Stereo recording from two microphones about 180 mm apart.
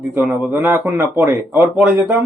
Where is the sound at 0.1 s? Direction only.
5° right (ahead or behind).